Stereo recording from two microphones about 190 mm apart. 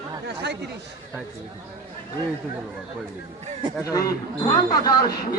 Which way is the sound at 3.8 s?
20° left (ahead or behind).